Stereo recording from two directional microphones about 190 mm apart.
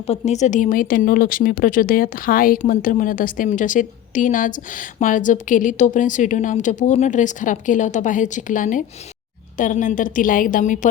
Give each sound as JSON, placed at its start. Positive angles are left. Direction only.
{"t": 0.1, "sound": "speech", "side_deg": 35}